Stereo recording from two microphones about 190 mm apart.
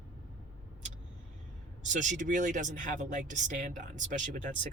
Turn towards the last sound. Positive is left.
turn(degrees=-40)  # may be behind; listen again after turning